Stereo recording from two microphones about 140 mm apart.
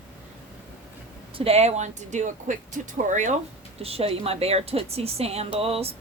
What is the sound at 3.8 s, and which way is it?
A woman's voice, 45° right (ahead or behind).